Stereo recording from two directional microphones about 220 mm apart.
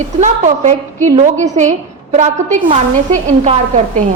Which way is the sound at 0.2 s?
35° right (ahead or behind).